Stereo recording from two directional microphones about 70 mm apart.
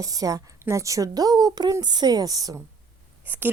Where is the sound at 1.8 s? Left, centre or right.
Right.